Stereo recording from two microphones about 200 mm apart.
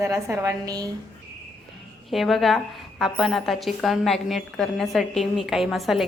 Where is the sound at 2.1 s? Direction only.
Centre (ahead or behind).